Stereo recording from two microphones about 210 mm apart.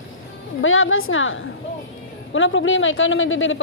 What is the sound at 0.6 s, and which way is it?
Speech, 70° left (ahead or behind).